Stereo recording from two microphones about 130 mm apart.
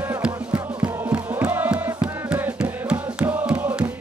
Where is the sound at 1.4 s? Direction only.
15° right (ahead or behind).